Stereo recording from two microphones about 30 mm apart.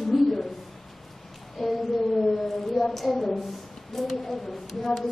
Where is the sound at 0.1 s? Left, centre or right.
Centre.